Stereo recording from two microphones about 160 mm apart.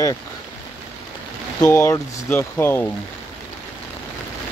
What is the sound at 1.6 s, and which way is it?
Speech, 20° left (ahead or behind).